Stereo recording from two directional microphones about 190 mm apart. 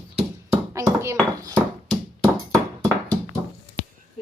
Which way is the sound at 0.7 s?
15° right (ahead or behind).